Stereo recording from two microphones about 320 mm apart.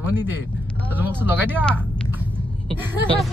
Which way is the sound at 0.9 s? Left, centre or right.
Centre.